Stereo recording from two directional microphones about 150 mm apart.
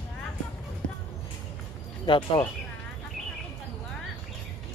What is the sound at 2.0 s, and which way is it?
Speech, 30° left (ahead or behind).